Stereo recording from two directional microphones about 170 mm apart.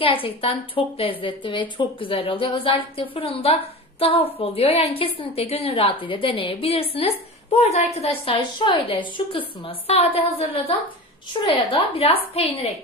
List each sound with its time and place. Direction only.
0.0 s a woman's voice: 35° left (ahead or behind)